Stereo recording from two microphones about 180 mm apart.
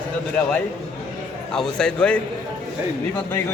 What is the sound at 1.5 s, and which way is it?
A man's voice, 5° left (ahead or behind).